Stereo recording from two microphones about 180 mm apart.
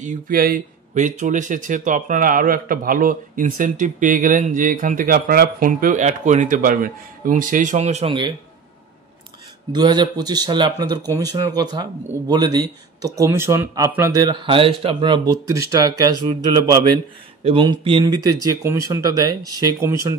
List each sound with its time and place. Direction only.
0.0 s speech: 50° right (ahead or behind); by 8.3 s 30° right (ahead or behind)
9.7 s speech: 25° right (ahead or behind)